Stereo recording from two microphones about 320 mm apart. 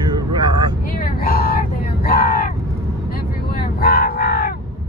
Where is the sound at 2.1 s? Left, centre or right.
Left.